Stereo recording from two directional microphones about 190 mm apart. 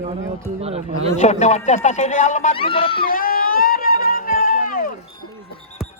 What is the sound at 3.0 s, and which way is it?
Run, 50° left (ahead or behind).